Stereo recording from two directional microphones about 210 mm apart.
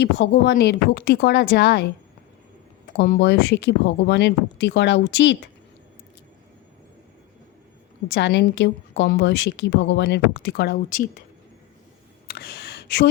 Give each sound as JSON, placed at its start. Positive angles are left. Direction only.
{"t": 0.0, "sound": "a woman's voice", "side_deg": 55}
{"t": 3.0, "sound": "a woman's voice", "side_deg": 55}
{"t": 8.0, "sound": "a woman's voice", "side_deg": 55}
{"t": 10.8, "sound": "speech", "side_deg": 40}
{"t": 12.3, "sound": "a sound", "side_deg": 50}